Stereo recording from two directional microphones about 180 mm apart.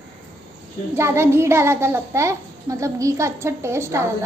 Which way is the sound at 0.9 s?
15° right (ahead or behind).